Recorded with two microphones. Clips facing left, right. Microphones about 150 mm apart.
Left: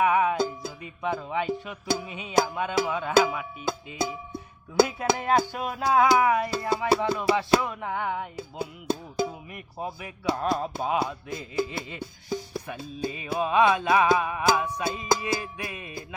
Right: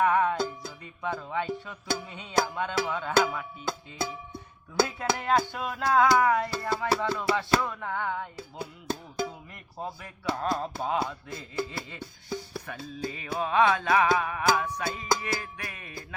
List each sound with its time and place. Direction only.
0.0 s music: 10° left (ahead or behind)
4.8 s speech: 10° left (ahead or behind)